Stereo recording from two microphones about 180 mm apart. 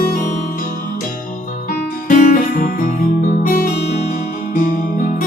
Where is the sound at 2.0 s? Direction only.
45° left (ahead or behind).